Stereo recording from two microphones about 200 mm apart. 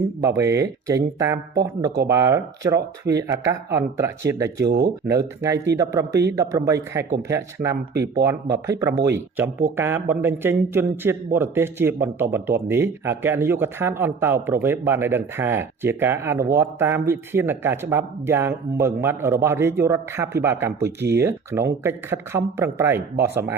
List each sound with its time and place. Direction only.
0.2 s a man's voice: 15° right (ahead or behind)
4.6 s speech: 55° right (ahead or behind)
5.0 s a man's voice: 15° right (ahead or behind)